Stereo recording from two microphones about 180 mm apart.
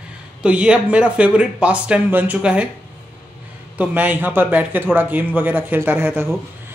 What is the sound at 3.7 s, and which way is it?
A man's voice, 10° right (ahead or behind).